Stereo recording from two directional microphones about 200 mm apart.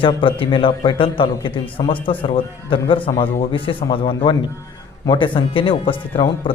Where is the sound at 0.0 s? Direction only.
25° left (ahead or behind).